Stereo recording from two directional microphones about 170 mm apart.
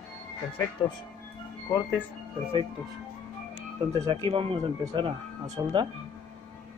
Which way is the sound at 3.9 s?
20° right (ahead or behind).